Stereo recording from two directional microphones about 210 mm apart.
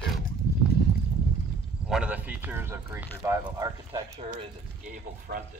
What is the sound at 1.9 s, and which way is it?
Speech, 5° right (ahead or behind).